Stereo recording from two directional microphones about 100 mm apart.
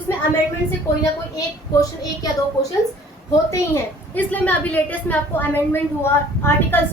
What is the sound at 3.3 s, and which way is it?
Speech, 30° left (ahead or behind).